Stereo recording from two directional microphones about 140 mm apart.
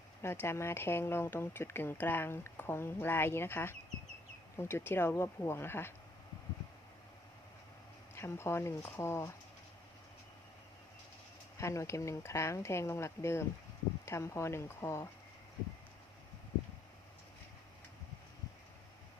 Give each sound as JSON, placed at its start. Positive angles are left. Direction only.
{"t": 0.2, "sound": "speech", "side_deg": 20}
{"t": 8.1, "sound": "speech", "side_deg": 20}
{"t": 11.5, "sound": "speech", "side_deg": 20}